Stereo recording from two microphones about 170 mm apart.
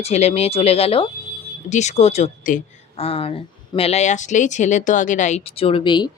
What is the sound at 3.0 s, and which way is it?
Speech, 35° left (ahead or behind).